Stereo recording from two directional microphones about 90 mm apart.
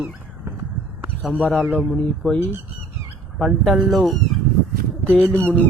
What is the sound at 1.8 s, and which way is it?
Speech, 10° left (ahead or behind).